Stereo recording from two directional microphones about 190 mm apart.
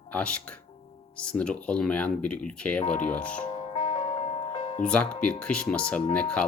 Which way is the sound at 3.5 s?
40° left (ahead or behind).